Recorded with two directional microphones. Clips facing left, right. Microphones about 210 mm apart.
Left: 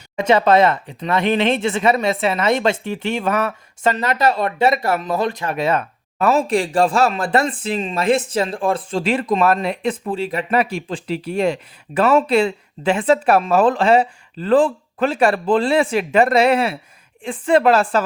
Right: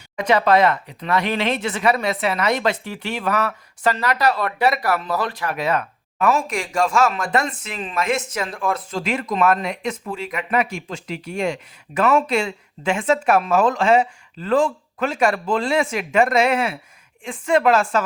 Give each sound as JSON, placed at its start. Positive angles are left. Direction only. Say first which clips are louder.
{"t": 0.2, "sound": "speech", "louder": "left 2 dB", "side_deg": 25}